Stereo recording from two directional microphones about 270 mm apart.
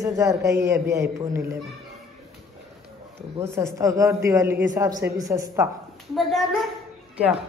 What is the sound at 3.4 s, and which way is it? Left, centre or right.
A man's voice, centre.